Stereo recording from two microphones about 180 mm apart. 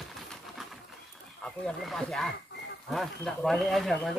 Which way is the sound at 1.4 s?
5° left (ahead or behind).